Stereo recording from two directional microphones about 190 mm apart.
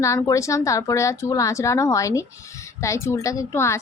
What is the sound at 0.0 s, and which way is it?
Speech, 15° left (ahead or behind).